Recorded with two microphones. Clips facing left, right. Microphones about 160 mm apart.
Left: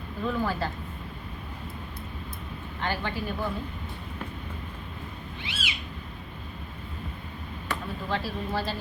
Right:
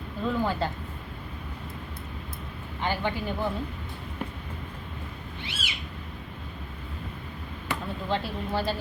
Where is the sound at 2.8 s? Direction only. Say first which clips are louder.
Right 2 dB; 15° right (ahead or behind).